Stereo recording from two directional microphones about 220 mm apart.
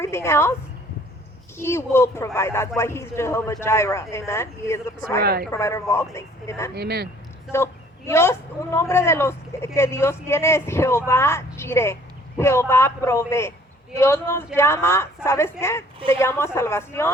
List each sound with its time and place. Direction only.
0.0 s a woman's voice: 10° left (ahead or behind)
1.5 s a man's voice: 10° left (ahead or behind)
5.2 s speech: 45° right (ahead or behind)
5.5 s a man's voice: 15° left (ahead or behind)
6.7 s speech: 45° right (ahead or behind)
7.5 s a man's voice: 10° left (ahead or behind)